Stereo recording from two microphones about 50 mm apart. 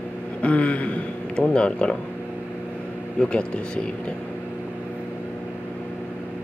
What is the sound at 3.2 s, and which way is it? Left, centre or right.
Speech, centre.